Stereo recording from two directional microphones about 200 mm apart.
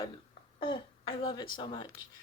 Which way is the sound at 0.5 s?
25° left (ahead or behind).